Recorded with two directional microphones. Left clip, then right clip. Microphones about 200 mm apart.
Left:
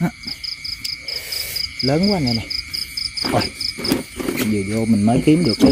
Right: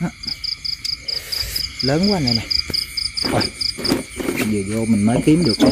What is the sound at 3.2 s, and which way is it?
Insect, 15° left (ahead or behind).